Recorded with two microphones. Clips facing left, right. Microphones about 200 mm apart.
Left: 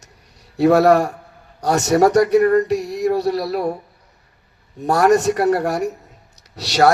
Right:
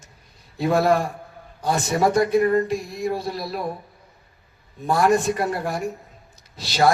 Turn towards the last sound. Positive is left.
turn(degrees=70)  # may be behind; listen again after turning